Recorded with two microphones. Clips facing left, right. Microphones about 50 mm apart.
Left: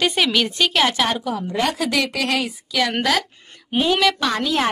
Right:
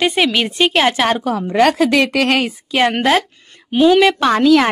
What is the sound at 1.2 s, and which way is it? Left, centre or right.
A woman's voice, right.